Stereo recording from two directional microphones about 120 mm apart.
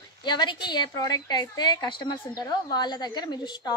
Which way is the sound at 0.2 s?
40° left (ahead or behind).